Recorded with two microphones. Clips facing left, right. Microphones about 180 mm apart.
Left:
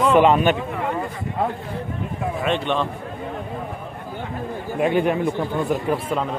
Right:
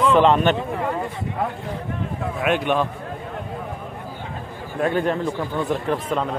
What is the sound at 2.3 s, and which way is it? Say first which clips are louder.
Speech: right 2 dB; 5° right (ahead or behind).